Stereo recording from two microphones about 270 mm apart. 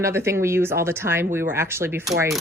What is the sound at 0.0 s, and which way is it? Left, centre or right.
Speech, centre.